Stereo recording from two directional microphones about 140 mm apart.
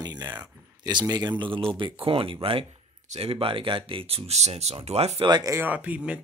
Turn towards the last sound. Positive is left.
turn(degrees=-10)  # may be behind; listen again after turning